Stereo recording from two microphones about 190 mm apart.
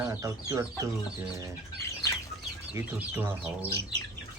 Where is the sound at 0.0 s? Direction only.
15° right (ahead or behind).